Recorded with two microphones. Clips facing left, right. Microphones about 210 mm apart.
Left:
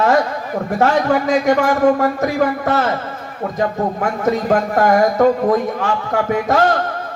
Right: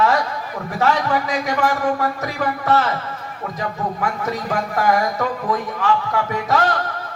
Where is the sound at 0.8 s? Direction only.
45° left (ahead or behind).